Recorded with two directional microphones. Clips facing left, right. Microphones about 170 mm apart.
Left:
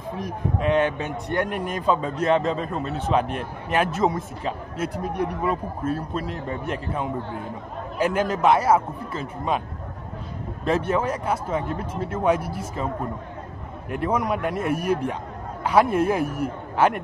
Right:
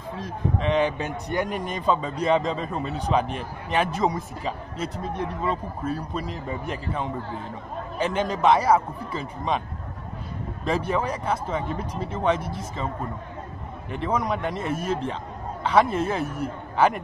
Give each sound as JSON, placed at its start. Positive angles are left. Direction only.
{"t": 0.1, "sound": "a man's voice", "side_deg": 15}
{"t": 0.7, "sound": "a man's voice", "side_deg": 0}
{"t": 5.9, "sound": "a man's voice", "side_deg": 5}
{"t": 10.6, "sound": "a man's voice", "side_deg": 0}